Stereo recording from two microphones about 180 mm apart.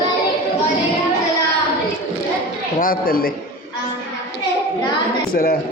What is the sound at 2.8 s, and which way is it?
Speech, 55° left (ahead or behind).